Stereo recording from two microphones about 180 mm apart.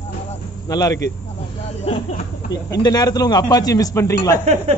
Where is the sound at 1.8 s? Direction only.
35° left (ahead or behind).